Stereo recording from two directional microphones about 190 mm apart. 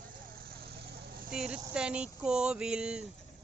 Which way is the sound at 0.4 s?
55° right (ahead or behind).